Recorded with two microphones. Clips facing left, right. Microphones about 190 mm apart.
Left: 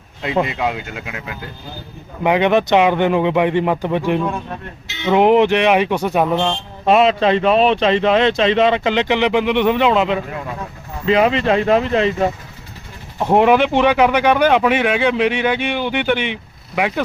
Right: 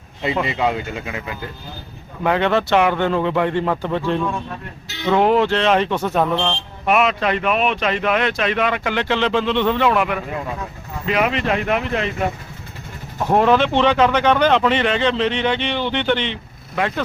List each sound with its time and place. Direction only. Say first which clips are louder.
0.4 s speech: right 1 dB; centre (ahead or behind)
2.2 s speech: left 3 dB; 15° left (ahead or behind)
6.8 s a man's voice: left 5 dB; 30° left (ahead or behind)
13.3 s speech: left 2 dB; 15° left (ahead or behind)